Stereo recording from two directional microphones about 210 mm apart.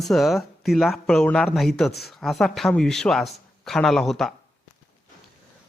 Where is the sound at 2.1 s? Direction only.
Centre (ahead or behind).